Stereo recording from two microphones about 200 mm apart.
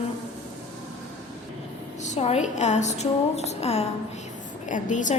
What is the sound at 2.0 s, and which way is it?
A woman's voice, 35° left (ahead or behind).